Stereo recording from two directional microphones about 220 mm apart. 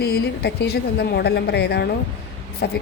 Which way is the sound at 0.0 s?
45° left (ahead or behind).